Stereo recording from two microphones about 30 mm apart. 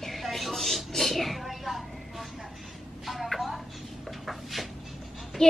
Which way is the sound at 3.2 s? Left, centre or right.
Centre.